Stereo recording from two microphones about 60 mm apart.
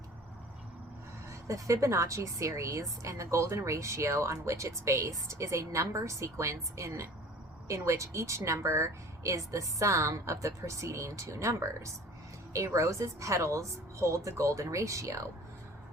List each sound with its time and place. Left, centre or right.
1.3 s a woman's voice: right